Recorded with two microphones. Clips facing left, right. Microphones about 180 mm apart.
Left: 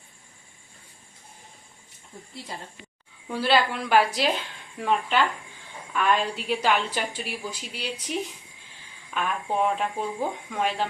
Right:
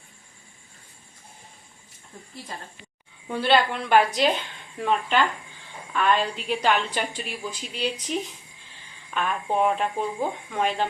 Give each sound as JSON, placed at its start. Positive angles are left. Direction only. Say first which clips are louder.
{"t": 3.2, "sound": "a woman's voice", "louder": "right 1 dB", "side_deg": 5}
{"t": 9.1, "sound": "a woman's voice", "louder": "right 2 dB", "side_deg": 0}